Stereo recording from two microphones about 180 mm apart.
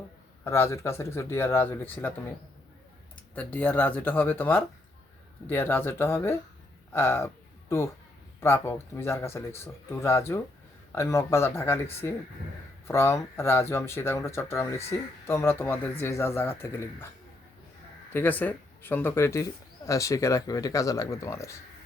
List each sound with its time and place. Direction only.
0.4 s speech: 15° left (ahead or behind)
3.3 s speech: 10° left (ahead or behind)
8.4 s speech: 15° left (ahead or behind)
18.1 s speech: 10° left (ahead or behind)